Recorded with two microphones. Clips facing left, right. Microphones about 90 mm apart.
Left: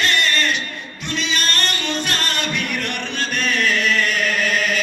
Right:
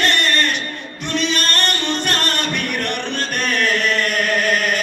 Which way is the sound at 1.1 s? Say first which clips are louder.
Right 3 dB; 50° right (ahead or behind).